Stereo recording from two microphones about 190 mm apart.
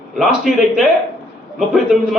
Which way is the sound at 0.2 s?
5° right (ahead or behind).